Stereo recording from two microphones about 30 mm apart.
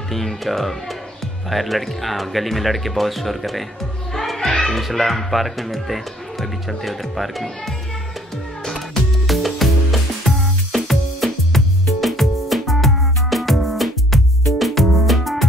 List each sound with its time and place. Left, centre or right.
0.1 s a child's voice: centre
9.3 s music: centre